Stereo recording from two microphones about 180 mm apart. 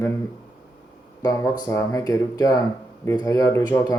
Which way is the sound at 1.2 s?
20° left (ahead or behind).